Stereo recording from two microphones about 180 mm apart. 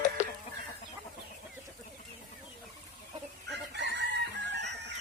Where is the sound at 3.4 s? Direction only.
70° right (ahead or behind).